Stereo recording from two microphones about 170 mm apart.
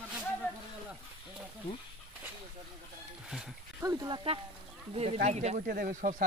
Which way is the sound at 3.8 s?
20° right (ahead or behind).